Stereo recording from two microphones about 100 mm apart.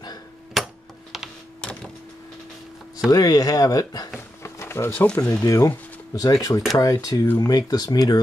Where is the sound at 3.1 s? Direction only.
40° left (ahead or behind).